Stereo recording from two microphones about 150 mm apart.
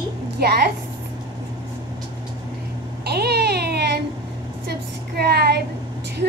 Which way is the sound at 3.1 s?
90° right.